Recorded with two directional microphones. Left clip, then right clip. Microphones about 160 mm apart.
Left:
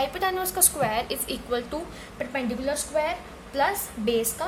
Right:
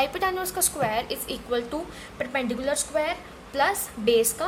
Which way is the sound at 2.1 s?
25° right (ahead or behind).